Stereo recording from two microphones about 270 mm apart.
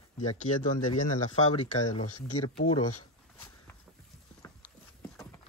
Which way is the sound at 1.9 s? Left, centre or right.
Left.